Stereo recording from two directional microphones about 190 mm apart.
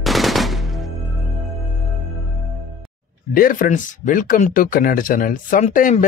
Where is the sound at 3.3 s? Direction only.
50° left (ahead or behind).